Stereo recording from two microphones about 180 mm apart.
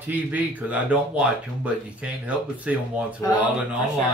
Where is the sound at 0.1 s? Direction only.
10° right (ahead or behind).